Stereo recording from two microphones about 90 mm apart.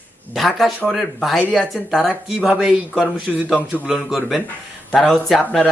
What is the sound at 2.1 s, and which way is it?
Speech, 15° right (ahead or behind).